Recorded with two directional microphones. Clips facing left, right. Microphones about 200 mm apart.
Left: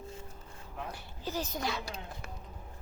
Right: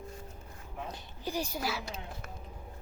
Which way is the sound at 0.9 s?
15° right (ahead or behind).